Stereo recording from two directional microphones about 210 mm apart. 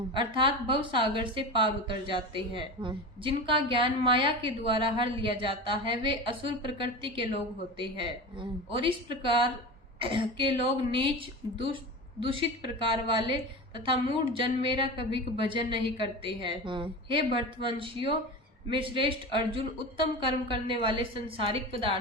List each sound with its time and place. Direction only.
0.1 s a woman's voice: 25° right (ahead or behind)